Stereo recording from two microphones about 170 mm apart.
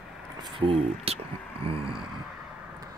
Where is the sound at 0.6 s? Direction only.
35° right (ahead or behind).